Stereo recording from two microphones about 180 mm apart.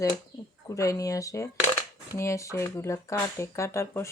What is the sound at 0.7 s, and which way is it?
Speech, 20° left (ahead or behind).